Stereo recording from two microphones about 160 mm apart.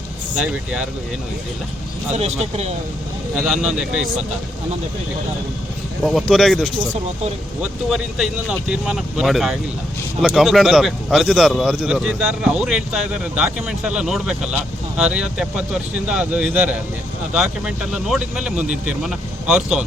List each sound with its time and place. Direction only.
0.3 s speech: 10° right (ahead or behind)
2.1 s speech: 40° right (ahead or behind)
3.3 s a man's voice: 5° right (ahead or behind)
6.0 s a man's voice: centre (ahead or behind)